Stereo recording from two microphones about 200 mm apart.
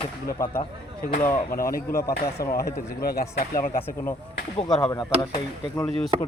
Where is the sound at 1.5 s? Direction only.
45° left (ahead or behind).